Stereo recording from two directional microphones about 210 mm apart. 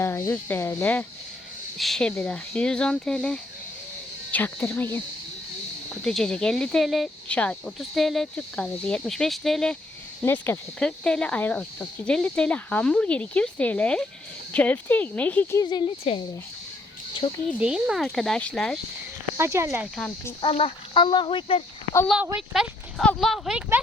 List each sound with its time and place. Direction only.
0.0 s speech: 10° left (ahead or behind)
15.6 s speech: 20° left (ahead or behind)
17.2 s speech: 25° left (ahead or behind)
17.6 s speech: 5° right (ahead or behind)
19.4 s speech: 15° right (ahead or behind)
20.0 s speech: 10° left (ahead or behind)
20.4 s speech: 25° left (ahead or behind)
21.9 s speech: 5° left (ahead or behind)